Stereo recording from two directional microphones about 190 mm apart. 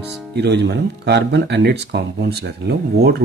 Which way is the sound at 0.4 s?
65° right (ahead or behind).